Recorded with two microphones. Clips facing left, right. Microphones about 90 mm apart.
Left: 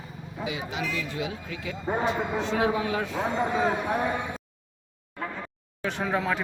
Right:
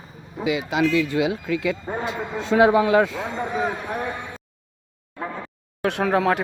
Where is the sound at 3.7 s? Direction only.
10° left (ahead or behind).